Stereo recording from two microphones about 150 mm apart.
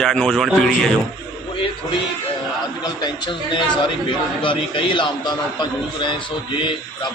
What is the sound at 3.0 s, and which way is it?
A man's voice, 30° left (ahead or behind).